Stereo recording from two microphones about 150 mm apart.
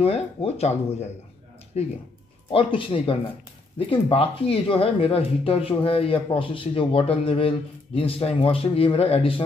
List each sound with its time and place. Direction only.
0.0 s speech: 40° left (ahead or behind)
2.5 s speech: 35° left (ahead or behind)